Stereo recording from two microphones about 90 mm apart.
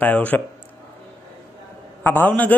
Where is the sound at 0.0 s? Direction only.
15° left (ahead or behind).